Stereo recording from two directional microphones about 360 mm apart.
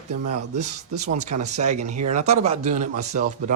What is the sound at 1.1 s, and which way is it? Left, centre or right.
Speech, centre.